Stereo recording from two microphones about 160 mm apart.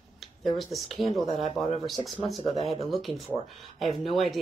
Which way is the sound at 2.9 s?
Centre (ahead or behind).